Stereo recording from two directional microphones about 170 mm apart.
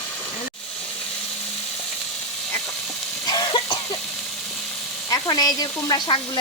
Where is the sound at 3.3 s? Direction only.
25° left (ahead or behind).